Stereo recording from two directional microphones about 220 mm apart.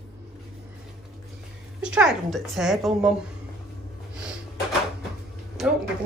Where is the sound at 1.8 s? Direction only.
5° right (ahead or behind).